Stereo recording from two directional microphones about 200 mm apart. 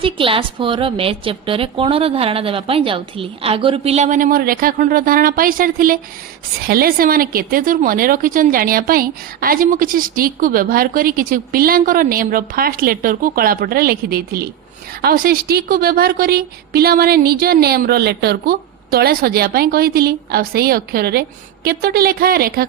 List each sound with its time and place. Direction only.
0.0 s a woman's voice: 25° right (ahead or behind); by 22.6 s 50° right (ahead or behind)